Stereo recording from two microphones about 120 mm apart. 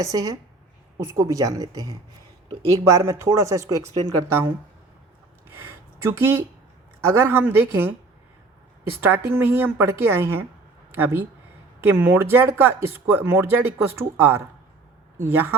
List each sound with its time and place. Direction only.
0.0 s speech: 30° right (ahead or behind)
6.1 s speech: 20° right (ahead or behind)
9.0 s speech: 20° right (ahead or behind)